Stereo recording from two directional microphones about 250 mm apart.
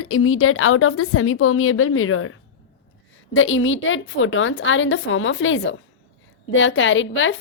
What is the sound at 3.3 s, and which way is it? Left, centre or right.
A woman's voice, left.